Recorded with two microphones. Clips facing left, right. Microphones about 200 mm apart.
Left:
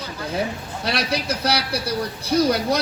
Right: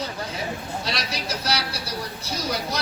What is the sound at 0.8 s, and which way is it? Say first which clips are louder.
Speech: left 6 dB; 60° left (ahead or behind).